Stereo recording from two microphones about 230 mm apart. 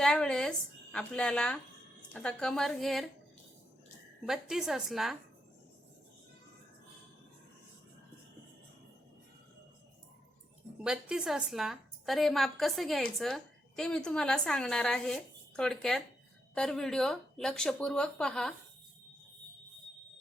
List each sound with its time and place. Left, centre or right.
0.0 s a woman's voice: centre
4.3 s a woman's voice: centre
10.8 s a woman's voice: centre